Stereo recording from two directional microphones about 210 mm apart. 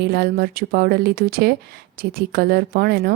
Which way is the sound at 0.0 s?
50° right (ahead or behind).